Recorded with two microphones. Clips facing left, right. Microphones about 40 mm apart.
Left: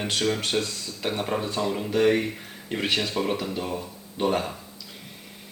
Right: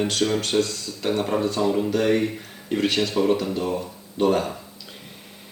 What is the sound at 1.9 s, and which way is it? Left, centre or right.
Speech, centre.